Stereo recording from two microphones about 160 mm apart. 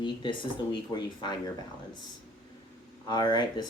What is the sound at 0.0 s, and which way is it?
Speech, 30° left (ahead or behind).